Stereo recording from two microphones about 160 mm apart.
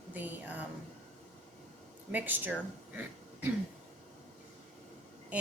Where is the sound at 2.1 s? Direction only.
10° right (ahead or behind).